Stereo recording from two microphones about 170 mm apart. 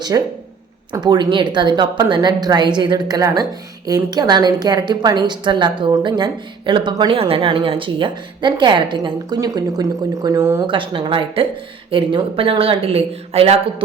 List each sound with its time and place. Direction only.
0.1 s speech: 20° right (ahead or behind)
10.7 s speech: 30° right (ahead or behind)